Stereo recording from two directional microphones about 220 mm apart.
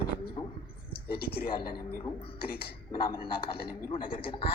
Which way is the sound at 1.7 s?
20° left (ahead or behind).